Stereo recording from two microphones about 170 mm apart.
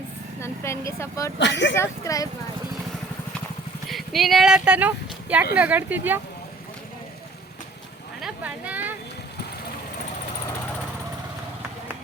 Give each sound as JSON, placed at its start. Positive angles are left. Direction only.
{"t": 0.3, "sound": "speech", "side_deg": 15}
{"t": 1.4, "sound": "speech", "side_deg": 90}
{"t": 1.7, "sound": "speech", "side_deg": 15}
{"t": 3.8, "sound": "speech", "side_deg": 0}
{"t": 8.2, "sound": "a sound", "side_deg": -10}